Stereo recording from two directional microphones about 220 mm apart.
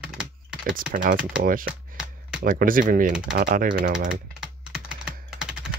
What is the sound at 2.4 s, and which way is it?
Speech, 40° right (ahead or behind).